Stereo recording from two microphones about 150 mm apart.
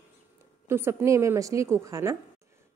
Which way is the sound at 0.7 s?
15° right (ahead or behind).